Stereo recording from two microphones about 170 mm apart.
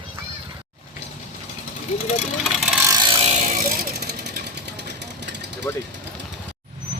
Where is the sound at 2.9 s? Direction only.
25° right (ahead or behind); by 3.6 s 45° right (ahead or behind).